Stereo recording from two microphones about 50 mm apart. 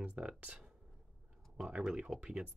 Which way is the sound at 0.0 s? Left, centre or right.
Right.